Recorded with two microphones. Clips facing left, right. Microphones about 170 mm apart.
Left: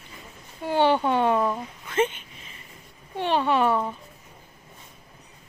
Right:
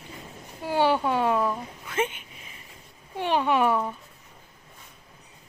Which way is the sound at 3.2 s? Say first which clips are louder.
Left 1 dB; 10° right (ahead or behind).